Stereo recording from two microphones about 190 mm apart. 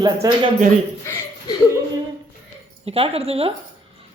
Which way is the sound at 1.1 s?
15° left (ahead or behind).